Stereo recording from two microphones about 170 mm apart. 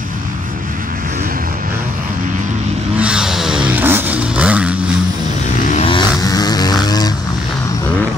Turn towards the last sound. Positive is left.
turn(degrees=25)  # may be behind; listen again after turning